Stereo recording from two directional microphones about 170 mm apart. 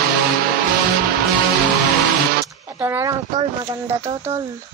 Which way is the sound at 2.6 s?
15° right (ahead or behind).